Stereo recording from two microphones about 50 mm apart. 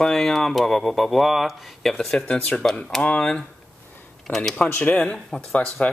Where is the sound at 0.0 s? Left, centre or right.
Centre.